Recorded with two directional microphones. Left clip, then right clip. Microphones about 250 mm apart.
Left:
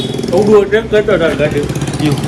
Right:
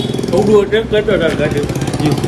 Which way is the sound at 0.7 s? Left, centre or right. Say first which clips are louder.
Left 2 dB; centre.